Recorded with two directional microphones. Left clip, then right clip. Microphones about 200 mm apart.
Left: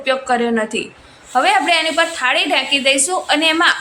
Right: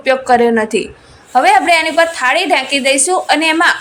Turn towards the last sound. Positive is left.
turn(degrees=-20)  # may be behind; listen again after turning